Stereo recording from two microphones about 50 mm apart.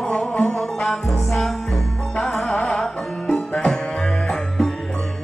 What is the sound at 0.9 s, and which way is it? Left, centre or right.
Music, centre.